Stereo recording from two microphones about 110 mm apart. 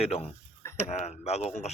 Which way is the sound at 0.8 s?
85° left.